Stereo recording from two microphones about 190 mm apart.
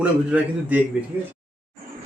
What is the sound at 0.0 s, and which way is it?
Speech, 5° right (ahead or behind).